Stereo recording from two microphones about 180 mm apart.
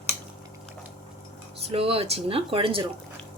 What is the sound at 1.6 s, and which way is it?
Dishes, 30° right (ahead or behind).